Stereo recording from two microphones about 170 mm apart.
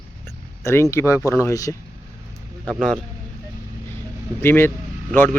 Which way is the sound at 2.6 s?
Centre (ahead or behind).